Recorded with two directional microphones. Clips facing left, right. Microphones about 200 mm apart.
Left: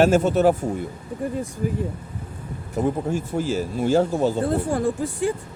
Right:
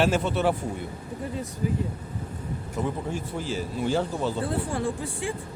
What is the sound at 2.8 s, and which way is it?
Speech, 45° left (ahead or behind).